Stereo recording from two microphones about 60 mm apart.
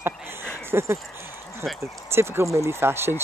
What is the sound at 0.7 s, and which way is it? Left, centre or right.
Speech, right.